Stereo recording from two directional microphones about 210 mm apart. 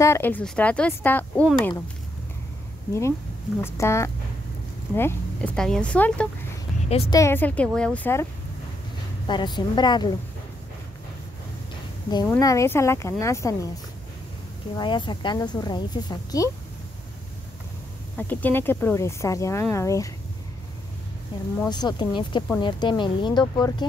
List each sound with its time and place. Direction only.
0.0 s speech: 10° left (ahead or behind)
2.9 s speech: 15° left (ahead or behind)
6.9 s speech: 25° left (ahead or behind)
7.2 s speech: 10° left (ahead or behind)
9.3 s speech: 20° left (ahead or behind)
12.1 s speech: 20° left (ahead or behind)
14.8 s speech: 20° left (ahead or behind)
18.1 s speech: 10° left (ahead or behind)
21.6 s speech: 20° left (ahead or behind)